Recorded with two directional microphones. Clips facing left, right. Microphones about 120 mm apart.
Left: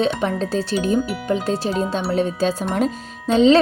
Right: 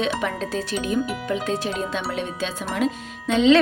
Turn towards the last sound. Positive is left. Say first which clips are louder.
# left 3 dB
turn(degrees=35)  # may be behind; listen again after turning